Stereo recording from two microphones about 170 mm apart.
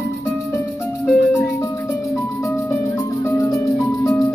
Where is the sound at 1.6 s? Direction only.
20° left (ahead or behind).